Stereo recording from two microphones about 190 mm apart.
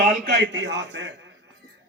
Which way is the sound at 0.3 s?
70° right (ahead or behind).